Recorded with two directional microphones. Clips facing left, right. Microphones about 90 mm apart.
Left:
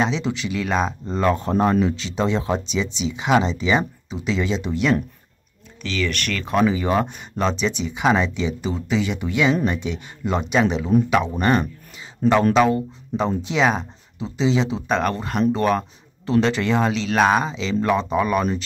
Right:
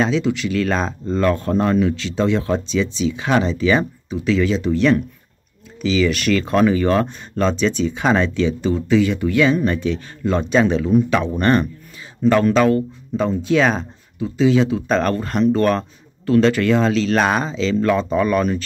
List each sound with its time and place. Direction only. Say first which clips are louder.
0.0 s speech: right 4 dB; 25° left (ahead or behind)
5.8 s speech: right 7 dB; 5° right (ahead or behind)
12.2 s speech: right 2 dB; 45° left (ahead or behind)
12.5 s speech: right 2 dB; 15° left (ahead or behind)
14.9 s speech: right 3 dB; 10° left (ahead or behind)
16.3 s speech: right 4 dB; 20° left (ahead or behind)
17.1 s speech: even; 5° left (ahead or behind)
17.5 s speech: right 3 dB; 15° left (ahead or behind)